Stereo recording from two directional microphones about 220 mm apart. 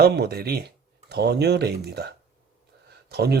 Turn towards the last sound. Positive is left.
turn(degrees=-45)  # may be behind; listen again after turning